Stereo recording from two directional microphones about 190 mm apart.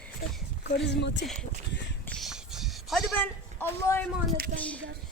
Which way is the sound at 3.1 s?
10° left (ahead or behind).